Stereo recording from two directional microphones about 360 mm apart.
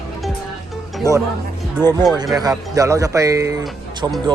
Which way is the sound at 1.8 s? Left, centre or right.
Centre.